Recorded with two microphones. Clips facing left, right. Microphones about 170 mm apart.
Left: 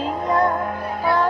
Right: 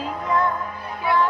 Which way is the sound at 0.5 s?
55° left (ahead or behind).